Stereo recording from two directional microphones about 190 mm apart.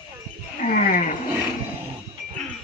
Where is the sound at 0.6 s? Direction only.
45° left (ahead or behind).